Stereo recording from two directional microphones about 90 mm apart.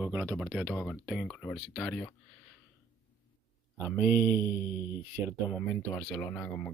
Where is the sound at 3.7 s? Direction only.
25° right (ahead or behind).